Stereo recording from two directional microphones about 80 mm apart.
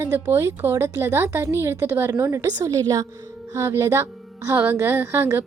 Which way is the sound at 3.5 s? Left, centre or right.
Right.